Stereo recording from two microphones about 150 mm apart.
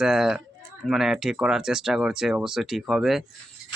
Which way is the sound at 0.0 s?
5° right (ahead or behind).